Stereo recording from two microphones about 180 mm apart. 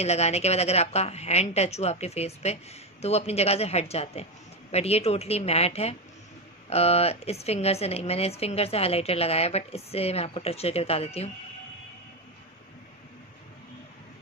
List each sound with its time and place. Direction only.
0.0 s a woman's voice: 35° left (ahead or behind)